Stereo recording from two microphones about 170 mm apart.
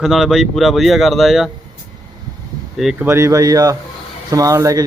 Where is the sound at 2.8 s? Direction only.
5° right (ahead or behind).